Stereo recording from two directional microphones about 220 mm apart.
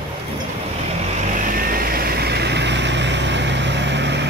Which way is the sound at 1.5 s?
40° right (ahead or behind).